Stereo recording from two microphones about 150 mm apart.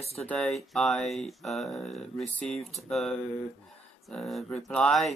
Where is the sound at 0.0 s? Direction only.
45° left (ahead or behind).